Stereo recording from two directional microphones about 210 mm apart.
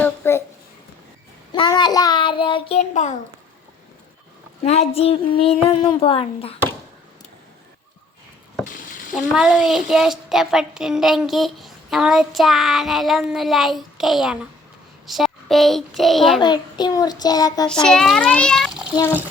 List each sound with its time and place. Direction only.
0.0 s a sound: 10° left (ahead or behind)
1.5 s child singing: 20° left (ahead or behind)
4.6 s a child's voice: 30° left (ahead or behind)
9.1 s a child's voice: centre (ahead or behind)
16.4 s a child's voice: 20° left (ahead or behind)
17.8 s speech: centre (ahead or behind)